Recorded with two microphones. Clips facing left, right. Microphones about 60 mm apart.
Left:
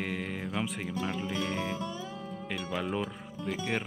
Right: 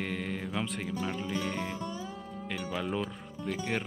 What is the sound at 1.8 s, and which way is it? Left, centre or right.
Music, left.